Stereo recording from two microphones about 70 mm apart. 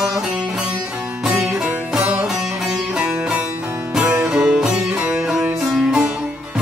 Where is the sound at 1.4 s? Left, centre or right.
Centre.